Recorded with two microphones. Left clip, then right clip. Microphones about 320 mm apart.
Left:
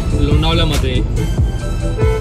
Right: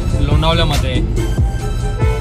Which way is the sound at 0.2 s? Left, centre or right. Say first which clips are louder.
Right 1 dB; centre.